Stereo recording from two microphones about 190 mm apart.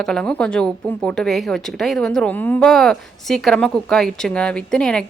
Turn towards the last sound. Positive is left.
turn(degrees=5)  # may be behind; listen again after turning